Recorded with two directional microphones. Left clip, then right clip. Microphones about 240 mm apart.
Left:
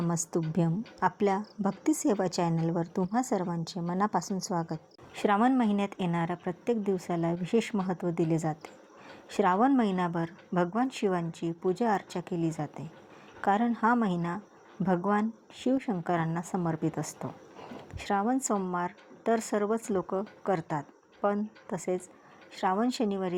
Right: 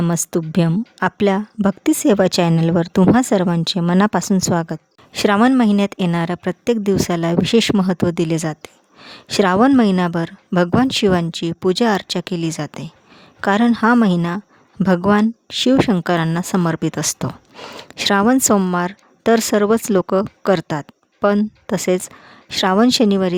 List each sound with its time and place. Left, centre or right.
0.0 s a woman's voice: right